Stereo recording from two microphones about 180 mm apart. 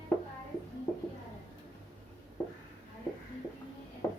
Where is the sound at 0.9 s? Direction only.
10° left (ahead or behind).